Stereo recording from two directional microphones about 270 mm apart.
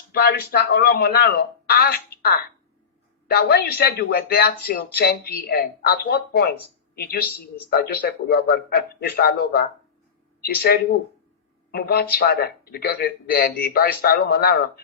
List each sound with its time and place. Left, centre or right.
0.1 s speech: left